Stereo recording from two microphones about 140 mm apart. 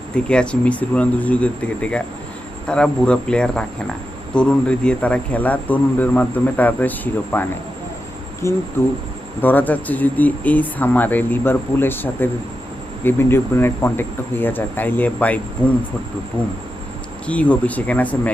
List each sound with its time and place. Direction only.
0.3 s a man's voice: 5° left (ahead or behind)
8.4 s speech: 20° left (ahead or behind)
16.4 s speech: 10° left (ahead or behind)